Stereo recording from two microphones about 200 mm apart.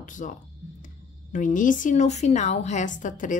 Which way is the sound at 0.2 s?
40° left (ahead or behind).